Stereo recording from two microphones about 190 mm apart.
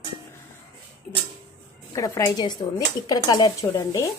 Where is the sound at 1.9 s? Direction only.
15° left (ahead or behind).